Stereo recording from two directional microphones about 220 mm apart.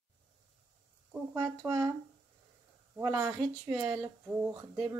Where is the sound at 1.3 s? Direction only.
15° right (ahead or behind).